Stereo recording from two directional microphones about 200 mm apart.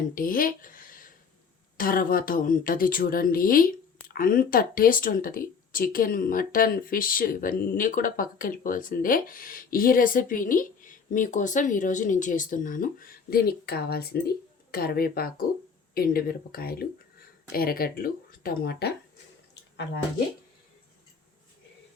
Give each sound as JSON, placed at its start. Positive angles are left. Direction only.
{"t": 0.1, "sound": "a woman's voice", "side_deg": 45}